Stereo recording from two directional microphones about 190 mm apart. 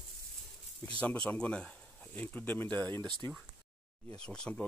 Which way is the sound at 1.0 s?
5° left (ahead or behind).